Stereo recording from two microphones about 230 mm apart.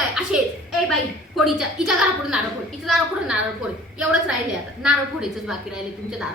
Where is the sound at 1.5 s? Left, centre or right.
Centre.